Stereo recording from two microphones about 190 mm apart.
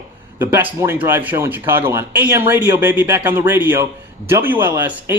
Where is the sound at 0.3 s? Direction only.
10° right (ahead or behind).